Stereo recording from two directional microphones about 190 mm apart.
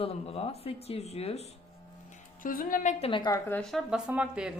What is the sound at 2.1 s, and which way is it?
Music, 45° left (ahead or behind).